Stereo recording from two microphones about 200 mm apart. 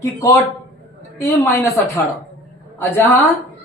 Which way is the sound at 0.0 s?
10° left (ahead or behind).